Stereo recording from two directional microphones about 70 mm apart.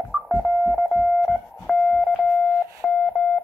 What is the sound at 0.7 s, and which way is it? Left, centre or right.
Telephone dialing, centre.